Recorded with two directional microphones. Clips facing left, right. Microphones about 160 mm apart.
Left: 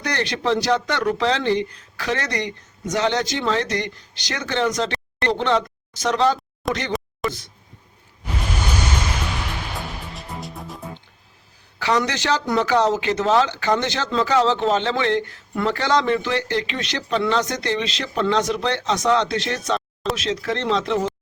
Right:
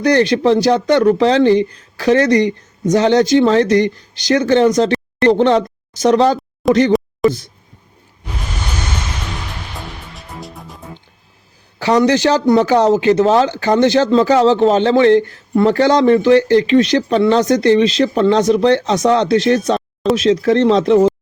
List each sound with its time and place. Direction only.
0.0 s a man's voice: 35° right (ahead or behind)
6.6 s speech: centre (ahead or behind)
7.2 s a sound: centre (ahead or behind)
9.7 s music: centre (ahead or behind)
11.8 s a man's voice: 35° right (ahead or behind)